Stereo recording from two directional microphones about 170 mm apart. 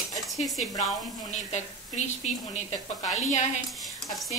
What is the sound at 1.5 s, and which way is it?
A woman's voice, 45° left (ahead or behind).